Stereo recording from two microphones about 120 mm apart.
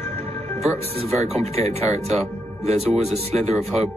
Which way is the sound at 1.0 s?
60° right (ahead or behind).